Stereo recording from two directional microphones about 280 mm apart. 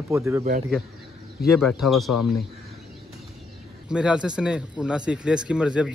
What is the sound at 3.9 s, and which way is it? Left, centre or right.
Speech, centre.